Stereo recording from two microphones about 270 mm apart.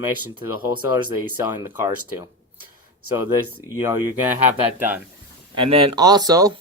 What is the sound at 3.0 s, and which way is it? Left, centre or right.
Speech, left.